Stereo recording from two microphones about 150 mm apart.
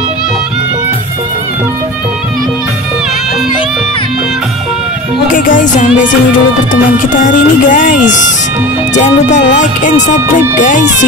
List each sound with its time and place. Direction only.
5.3 s music: 60° left (ahead or behind)
7.2 s speech: 65° left (ahead or behind)